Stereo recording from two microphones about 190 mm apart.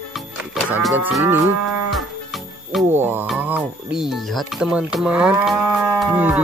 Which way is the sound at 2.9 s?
10° right (ahead or behind).